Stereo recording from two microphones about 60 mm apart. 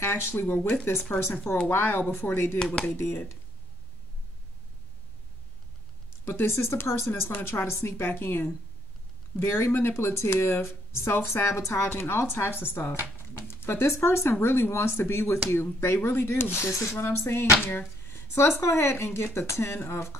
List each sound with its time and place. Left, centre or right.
0.1 s speech: left
0.9 s speech: left
1.7 s speech: left
2.6 s speech: centre
3.0 s speech: left
6.2 s speech: left
13.2 s a sound: left
14.4 s speech: left
18.1 s a sound: left
18.6 s speech: left